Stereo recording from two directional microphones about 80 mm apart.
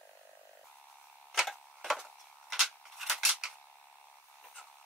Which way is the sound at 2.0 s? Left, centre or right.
Centre.